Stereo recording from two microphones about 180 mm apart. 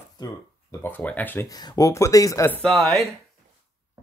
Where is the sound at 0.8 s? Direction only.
10° left (ahead or behind).